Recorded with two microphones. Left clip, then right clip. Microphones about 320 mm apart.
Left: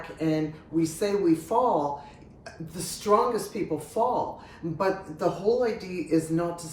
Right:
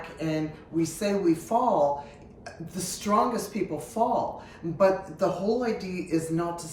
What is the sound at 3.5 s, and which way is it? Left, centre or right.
Speech, centre.